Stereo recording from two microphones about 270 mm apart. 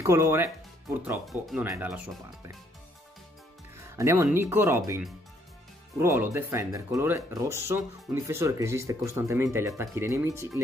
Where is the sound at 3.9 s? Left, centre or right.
Centre.